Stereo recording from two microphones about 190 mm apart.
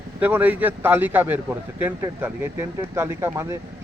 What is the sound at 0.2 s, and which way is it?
Speech, 10° right (ahead or behind).